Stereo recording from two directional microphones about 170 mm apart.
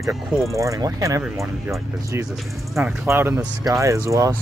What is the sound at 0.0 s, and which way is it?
Speech, 20° right (ahead or behind).